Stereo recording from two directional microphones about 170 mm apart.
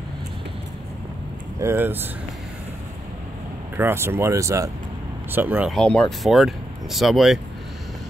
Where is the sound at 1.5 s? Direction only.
15° right (ahead or behind).